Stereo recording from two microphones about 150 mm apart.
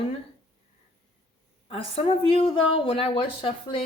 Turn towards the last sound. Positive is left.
turn(degrees=35)  # may be behind; listen again after turning